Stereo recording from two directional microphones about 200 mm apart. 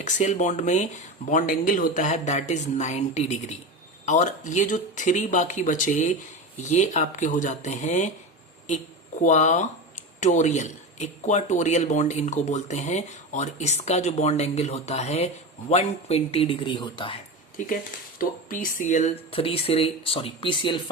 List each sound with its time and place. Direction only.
0.0 s speech: 35° left (ahead or behind)
9.2 s speech: 35° left (ahead or behind)
18.2 s speech: 45° left (ahead or behind); by 20.9 s 25° left (ahead or behind)